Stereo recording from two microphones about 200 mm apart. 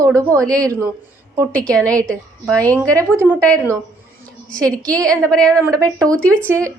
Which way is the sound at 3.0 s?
10° right (ahead or behind).